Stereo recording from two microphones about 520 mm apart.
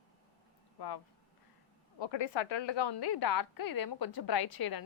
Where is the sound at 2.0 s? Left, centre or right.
Left.